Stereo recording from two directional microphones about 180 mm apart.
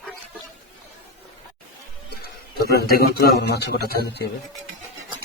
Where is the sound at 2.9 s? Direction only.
60° left (ahead or behind).